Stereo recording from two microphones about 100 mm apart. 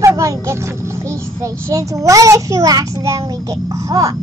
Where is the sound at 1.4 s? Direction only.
30° right (ahead or behind).